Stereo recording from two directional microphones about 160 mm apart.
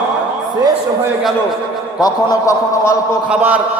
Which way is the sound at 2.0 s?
25° left (ahead or behind).